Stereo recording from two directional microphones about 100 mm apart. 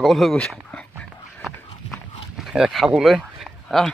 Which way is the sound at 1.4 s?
Centre (ahead or behind).